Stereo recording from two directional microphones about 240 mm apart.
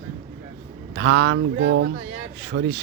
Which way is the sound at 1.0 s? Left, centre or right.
Right.